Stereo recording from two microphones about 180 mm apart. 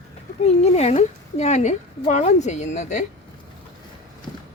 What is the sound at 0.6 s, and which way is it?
Speech, 35° left (ahead or behind).